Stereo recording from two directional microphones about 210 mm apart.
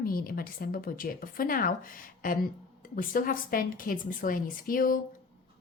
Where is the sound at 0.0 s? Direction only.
45° left (ahead or behind).